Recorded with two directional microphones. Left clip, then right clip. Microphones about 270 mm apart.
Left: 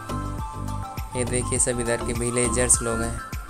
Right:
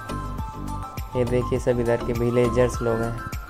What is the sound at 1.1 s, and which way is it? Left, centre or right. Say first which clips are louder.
Speech: right 4 dB; centre.